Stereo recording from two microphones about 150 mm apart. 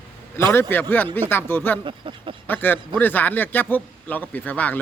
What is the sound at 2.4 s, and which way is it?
A man's voice, 15° left (ahead or behind).